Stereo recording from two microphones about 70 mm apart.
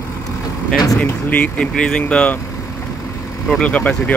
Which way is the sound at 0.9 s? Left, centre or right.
Left.